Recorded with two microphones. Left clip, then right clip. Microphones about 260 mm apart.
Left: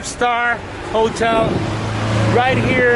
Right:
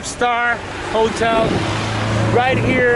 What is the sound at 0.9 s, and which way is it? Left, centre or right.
Speech, left.